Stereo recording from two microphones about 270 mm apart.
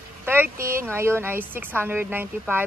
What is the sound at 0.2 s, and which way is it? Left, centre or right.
Speech, centre.